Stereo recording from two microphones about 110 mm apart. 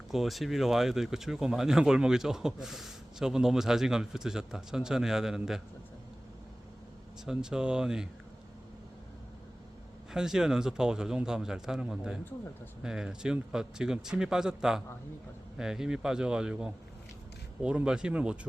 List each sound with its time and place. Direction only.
0.1 s speech: centre (ahead or behind)
7.3 s a man's voice: 5° right (ahead or behind)
10.1 s a man's voice: 5° right (ahead or behind)